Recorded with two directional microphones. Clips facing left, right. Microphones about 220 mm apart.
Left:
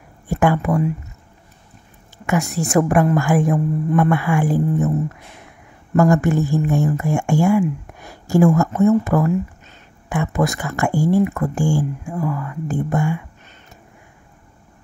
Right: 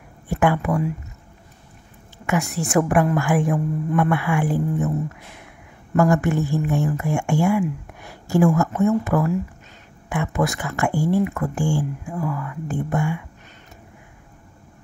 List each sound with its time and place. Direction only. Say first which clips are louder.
0.3 s speech: left 2 dB; 40° left (ahead or behind)
2.2 s speech: left 3 dB; 40° left (ahead or behind)
5.9 s speech: left 3 dB; 40° left (ahead or behind)